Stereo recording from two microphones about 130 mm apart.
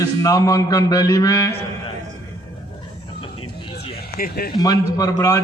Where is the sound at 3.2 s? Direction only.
45° left (ahead or behind).